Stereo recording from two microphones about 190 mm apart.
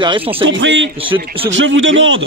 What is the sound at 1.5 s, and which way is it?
Speech, 85° right.